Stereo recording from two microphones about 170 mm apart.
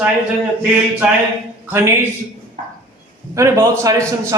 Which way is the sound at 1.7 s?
15° right (ahead or behind).